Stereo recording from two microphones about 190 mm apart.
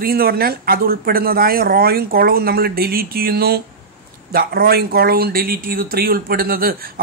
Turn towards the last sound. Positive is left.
turn(degrees=-50)  # may be behind; listen again after turning